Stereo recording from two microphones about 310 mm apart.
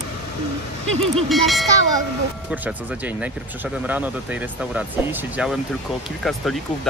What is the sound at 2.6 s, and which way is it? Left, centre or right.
Speech, centre.